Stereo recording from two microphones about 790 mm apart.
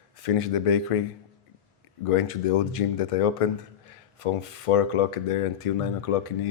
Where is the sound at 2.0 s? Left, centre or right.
Left.